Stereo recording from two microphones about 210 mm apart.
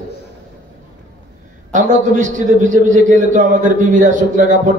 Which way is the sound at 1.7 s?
35° right (ahead or behind).